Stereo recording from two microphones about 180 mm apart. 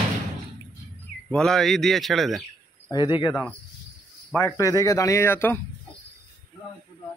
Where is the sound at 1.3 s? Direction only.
5° left (ahead or behind).